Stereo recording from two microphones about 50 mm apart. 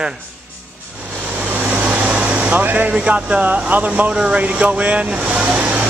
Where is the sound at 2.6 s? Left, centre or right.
Right.